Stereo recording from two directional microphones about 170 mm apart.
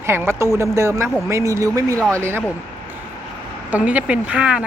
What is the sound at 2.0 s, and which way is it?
Speech, 5° left (ahead or behind).